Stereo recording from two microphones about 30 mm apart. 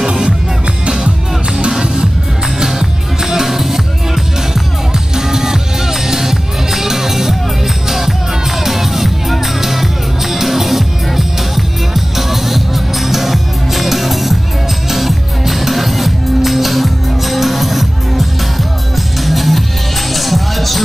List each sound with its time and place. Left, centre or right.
0.0 s music: centre
2.6 s music: centre